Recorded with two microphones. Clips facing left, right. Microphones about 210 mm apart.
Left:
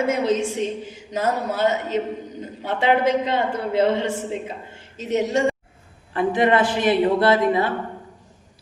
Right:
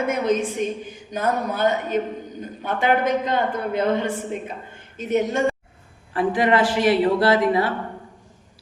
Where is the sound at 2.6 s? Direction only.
25° left (ahead or behind).